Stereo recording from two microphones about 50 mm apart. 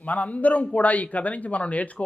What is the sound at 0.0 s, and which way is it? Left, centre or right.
Speech, left.